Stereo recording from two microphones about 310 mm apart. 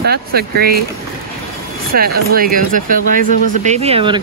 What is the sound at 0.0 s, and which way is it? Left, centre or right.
Speech, right.